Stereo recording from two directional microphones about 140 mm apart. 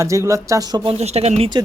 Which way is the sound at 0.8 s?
45° right (ahead or behind).